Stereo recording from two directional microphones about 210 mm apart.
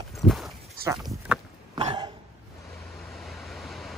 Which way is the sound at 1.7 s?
20° right (ahead or behind).